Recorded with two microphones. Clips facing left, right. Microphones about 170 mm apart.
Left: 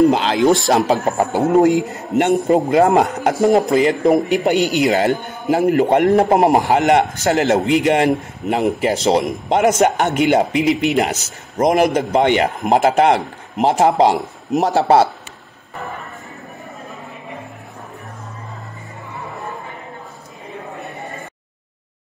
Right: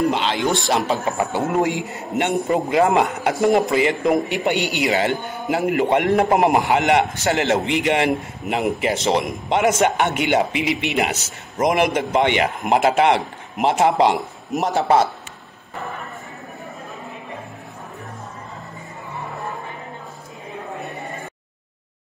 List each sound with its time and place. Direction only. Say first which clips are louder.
0.1 s a man's voice: left 6 dB; 40° left (ahead or behind)